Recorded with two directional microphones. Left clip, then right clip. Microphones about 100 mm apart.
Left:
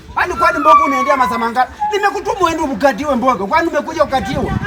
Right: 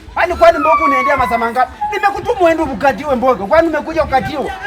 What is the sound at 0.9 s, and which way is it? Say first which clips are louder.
Speech: right 1 dB; 40° right (ahead or behind).